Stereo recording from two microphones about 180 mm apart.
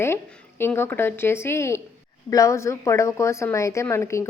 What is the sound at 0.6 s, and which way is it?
A woman's voice, 10° left (ahead or behind).